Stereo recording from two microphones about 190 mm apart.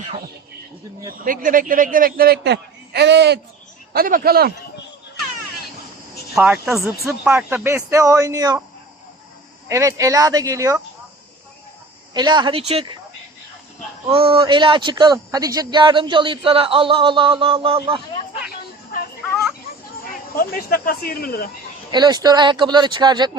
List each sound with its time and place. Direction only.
1.2 s a man's voice: 45° right (ahead or behind); by 3.4 s 60° right (ahead or behind)
3.9 s a man's voice: 50° right (ahead or behind)
6.3 s speech: centre (ahead or behind); by 8.6 s 15° right (ahead or behind)
9.6 s speech: 15° right (ahead or behind)
12.1 s a man's voice: 25° right (ahead or behind)
14.1 s a man's voice: 30° right (ahead or behind)
20.3 s speech: 50° left (ahead or behind)
21.9 s a man's voice: 20° right (ahead or behind)